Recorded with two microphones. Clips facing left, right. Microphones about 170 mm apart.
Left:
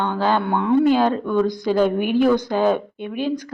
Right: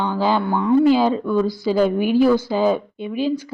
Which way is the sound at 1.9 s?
55° left (ahead or behind).